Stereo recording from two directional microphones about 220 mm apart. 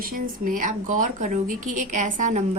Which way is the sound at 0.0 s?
40° right (ahead or behind).